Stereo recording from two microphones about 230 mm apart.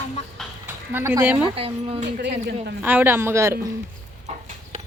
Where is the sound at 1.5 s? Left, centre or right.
Right.